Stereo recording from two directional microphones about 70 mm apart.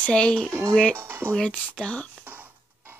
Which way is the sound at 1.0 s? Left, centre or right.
Right.